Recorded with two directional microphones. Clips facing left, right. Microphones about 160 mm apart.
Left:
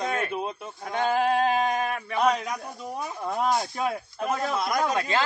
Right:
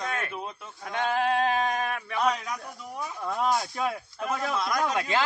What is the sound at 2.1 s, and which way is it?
A man's voice, 20° left (ahead or behind).